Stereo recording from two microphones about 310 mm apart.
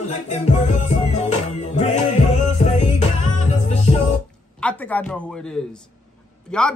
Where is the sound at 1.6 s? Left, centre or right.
Left.